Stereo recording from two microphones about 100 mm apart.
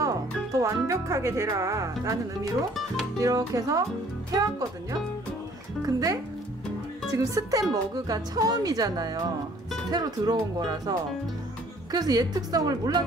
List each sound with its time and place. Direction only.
0.0 s speech: 35° right (ahead or behind)
3.2 s speech: 35° right (ahead or behind)
5.9 s speech: 35° right (ahead or behind)
7.2 s speech: 35° right (ahead or behind)